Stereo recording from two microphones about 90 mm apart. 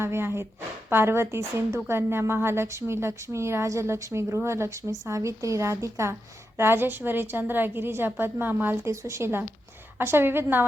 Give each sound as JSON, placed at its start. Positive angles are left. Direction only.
{"t": 0.0, "sound": "a woman's voice", "side_deg": -25}
{"t": 8.9, "sound": "a woman's voice", "side_deg": -35}